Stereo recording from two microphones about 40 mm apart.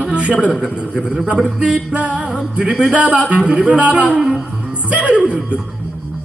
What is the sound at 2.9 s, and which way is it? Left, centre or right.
Music, right.